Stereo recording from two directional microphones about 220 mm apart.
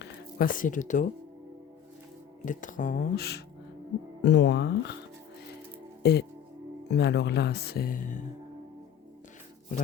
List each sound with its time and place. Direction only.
0.0 s speech: 40° left (ahead or behind)
2.4 s speech: 35° left (ahead or behind)
6.0 s music: 50° left (ahead or behind)
6.9 s speech: 50° left (ahead or behind)